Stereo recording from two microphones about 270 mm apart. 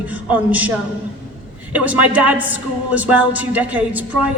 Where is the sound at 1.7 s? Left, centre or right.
Centre.